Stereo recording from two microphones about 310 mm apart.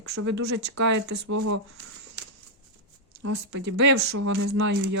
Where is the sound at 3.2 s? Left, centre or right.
Right.